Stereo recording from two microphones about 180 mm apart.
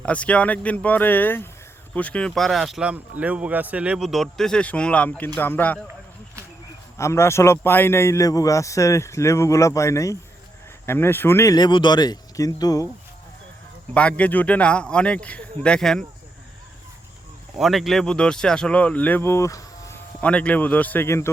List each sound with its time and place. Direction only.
0.0 s a man's voice: 5° left (ahead or behind)
7.0 s a man's voice: 15° left (ahead or behind)
13.9 s a man's voice: 5° left (ahead or behind)
17.6 s speech: centre (ahead or behind); by 20.0 s 15° left (ahead or behind)
20.2 s a man's voice: 5° left (ahead or behind)